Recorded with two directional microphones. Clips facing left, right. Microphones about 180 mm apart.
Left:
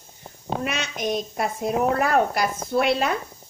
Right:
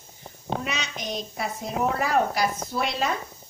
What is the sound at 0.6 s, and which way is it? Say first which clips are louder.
A woman's voice: left 5 dB; 55° left (ahead or behind).